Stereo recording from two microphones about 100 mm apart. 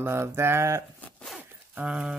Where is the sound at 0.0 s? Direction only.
25° right (ahead or behind).